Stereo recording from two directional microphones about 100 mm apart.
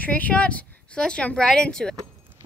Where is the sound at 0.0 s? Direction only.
15° left (ahead or behind).